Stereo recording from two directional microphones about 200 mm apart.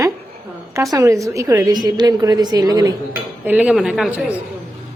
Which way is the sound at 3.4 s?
5° right (ahead or behind).